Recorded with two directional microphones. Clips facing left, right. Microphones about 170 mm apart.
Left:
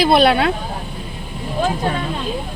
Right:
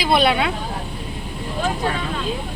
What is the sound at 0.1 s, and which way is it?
Speech, 40° left (ahead or behind).